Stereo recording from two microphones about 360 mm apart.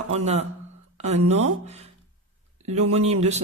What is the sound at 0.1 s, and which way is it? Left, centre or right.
Speech, centre.